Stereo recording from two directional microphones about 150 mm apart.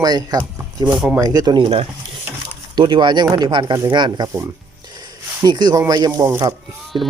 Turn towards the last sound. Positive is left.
turn(degrees=-30)  # may be behind; listen again after turning